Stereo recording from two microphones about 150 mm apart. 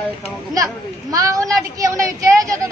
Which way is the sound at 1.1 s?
20° right (ahead or behind).